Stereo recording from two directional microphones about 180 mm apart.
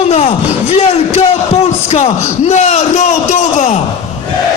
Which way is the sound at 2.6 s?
40° left (ahead or behind).